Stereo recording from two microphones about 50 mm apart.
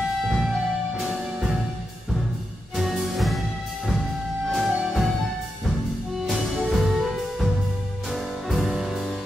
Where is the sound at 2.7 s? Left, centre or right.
Centre.